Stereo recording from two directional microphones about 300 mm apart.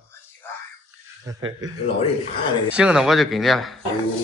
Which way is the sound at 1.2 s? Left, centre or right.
Centre.